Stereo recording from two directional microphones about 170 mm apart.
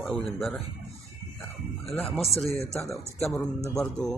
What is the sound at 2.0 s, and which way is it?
Burping, centre (ahead or behind).